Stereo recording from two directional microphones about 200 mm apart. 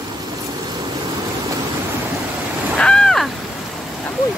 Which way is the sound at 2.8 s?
5° left (ahead or behind).